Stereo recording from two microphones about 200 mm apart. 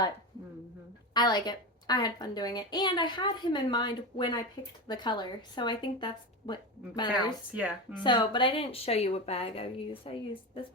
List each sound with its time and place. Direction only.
1.1 s a woman's voice: 20° left (ahead or behind)
7.5 s speech: 5° right (ahead or behind)
8.0 s a woman's voice: 25° left (ahead or behind)